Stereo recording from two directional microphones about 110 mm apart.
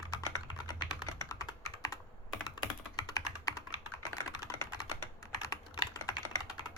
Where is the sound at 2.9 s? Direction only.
35° left (ahead or behind).